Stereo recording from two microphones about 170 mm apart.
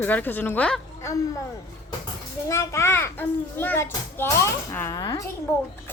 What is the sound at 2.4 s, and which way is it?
A child's voice, 15° left (ahead or behind).